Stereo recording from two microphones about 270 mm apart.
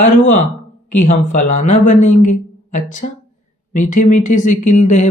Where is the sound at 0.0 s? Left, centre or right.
Left.